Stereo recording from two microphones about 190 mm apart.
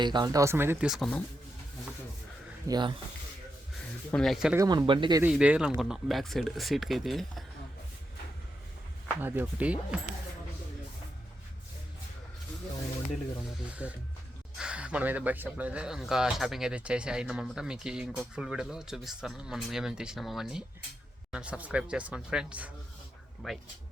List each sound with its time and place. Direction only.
0.0 s speech: 25° right (ahead or behind); by 1.2 s centre (ahead or behind)
2.6 s speech: 20° right (ahead or behind)
4.1 s speech: centre (ahead or behind)
4.5 s speech: 15° right (ahead or behind)
5.2 s speech: 5° right (ahead or behind)
9.2 s speech: 10° right (ahead or behind)
13.8 s speech: 5° right (ahead or behind)